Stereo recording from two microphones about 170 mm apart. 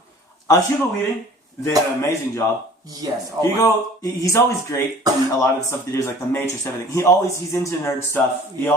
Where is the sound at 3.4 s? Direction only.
20° right (ahead or behind).